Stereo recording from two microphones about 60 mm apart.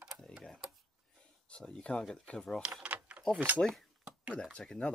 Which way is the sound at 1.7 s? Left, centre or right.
Centre.